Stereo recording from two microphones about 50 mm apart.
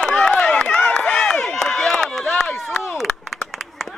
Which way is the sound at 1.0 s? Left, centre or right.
Centre.